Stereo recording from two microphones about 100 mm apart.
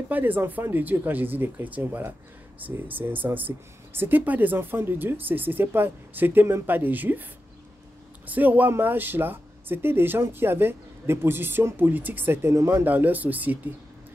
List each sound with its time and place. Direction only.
0.1 s speech: 20° right (ahead or behind)
8.3 s speech: 15° right (ahead or behind)